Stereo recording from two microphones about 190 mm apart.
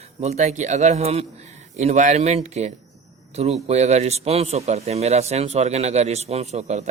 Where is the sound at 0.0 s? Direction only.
35° right (ahead or behind).